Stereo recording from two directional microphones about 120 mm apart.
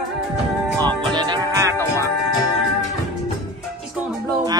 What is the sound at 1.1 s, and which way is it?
Music, 35° right (ahead or behind).